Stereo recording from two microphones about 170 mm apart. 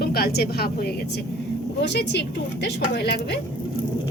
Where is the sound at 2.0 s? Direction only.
80° left.